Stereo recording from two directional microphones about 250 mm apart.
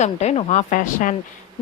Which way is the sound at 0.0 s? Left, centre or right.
Left.